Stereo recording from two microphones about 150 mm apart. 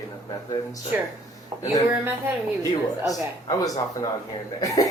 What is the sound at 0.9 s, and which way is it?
Speech, 15° right (ahead or behind).